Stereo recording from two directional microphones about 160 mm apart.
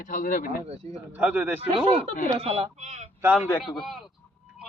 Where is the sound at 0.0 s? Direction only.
55° left (ahead or behind).